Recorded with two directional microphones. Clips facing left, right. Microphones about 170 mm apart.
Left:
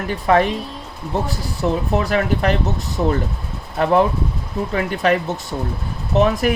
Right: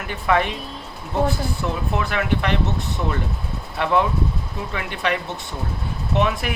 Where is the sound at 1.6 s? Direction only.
35° left (ahead or behind).